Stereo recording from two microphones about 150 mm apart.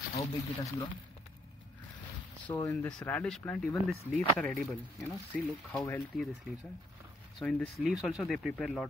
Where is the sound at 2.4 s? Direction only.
15° left (ahead or behind).